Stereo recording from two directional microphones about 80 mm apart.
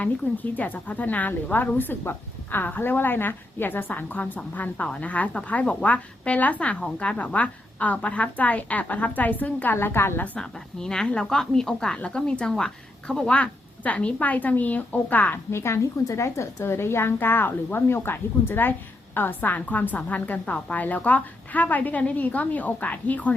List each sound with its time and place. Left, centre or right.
0.5 s a woman's voice: centre
10.3 s a woman's voice: centre
15.5 s a woman's voice: left